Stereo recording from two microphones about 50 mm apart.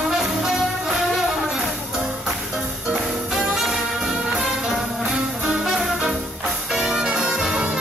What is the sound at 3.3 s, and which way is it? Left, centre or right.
Music, centre.